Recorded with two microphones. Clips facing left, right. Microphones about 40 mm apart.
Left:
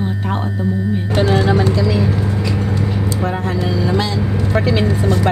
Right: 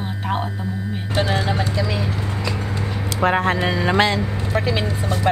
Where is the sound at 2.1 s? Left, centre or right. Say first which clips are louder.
Left 7 dB; centre.